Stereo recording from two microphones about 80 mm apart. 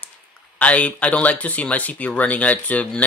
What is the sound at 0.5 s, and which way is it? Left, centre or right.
Speech, centre.